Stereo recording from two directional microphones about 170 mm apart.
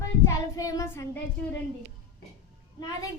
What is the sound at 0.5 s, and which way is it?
Child singing, 20° left (ahead or behind).